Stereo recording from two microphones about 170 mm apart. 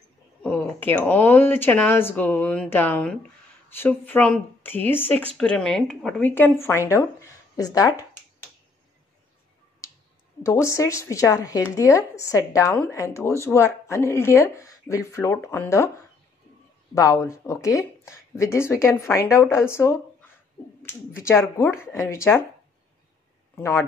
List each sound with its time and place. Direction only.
0.4 s speech: 10° left (ahead or behind)
10.4 s speech: 15° left (ahead or behind)
16.9 s speech: 20° left (ahead or behind)
23.5 s speech: 15° left (ahead or behind)